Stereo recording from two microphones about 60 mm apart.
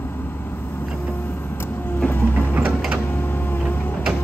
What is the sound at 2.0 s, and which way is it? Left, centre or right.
Printer, left.